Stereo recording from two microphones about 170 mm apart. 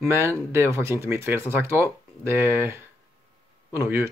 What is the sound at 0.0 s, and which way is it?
Speech, 15° right (ahead or behind).